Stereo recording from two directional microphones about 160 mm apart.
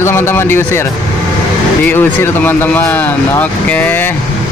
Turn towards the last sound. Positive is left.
turn(degrees=10)  # may be behind; listen again after turning